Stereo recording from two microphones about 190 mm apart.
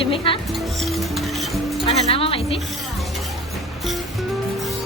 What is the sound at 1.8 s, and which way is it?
Speech, 30° left (ahead or behind).